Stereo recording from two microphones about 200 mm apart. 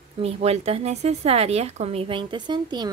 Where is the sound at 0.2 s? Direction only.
30° right (ahead or behind).